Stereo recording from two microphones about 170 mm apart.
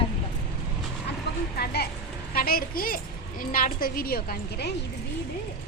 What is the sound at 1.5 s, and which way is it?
A woman's voice, 70° left (ahead or behind).